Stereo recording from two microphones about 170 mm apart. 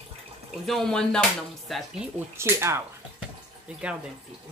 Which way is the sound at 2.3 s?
15° right (ahead or behind).